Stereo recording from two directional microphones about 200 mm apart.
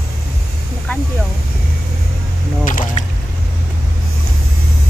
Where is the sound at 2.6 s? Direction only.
40° left (ahead or behind).